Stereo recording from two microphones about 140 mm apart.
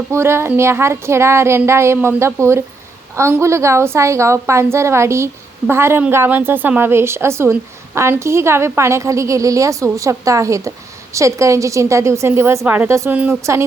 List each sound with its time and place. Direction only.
0.1 s a woman's voice: 20° right (ahead or behind)